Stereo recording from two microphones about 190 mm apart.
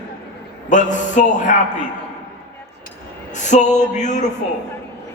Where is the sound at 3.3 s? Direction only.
40° left (ahead or behind).